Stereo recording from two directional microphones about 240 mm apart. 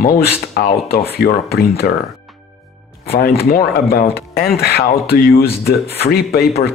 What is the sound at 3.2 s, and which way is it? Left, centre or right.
Speech, left.